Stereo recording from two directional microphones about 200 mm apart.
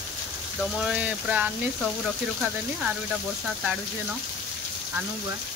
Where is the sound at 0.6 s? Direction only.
5° right (ahead or behind).